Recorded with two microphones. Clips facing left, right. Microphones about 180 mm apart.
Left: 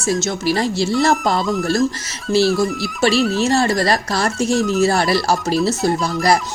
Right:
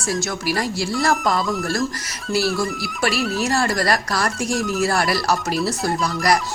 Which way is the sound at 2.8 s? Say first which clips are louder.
Left 6 dB; 25° left (ahead or behind).